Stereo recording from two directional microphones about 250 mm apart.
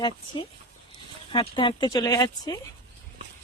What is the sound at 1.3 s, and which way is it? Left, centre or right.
Speech, centre.